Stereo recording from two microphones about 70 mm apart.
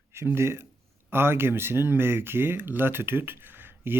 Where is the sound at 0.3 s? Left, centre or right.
Right.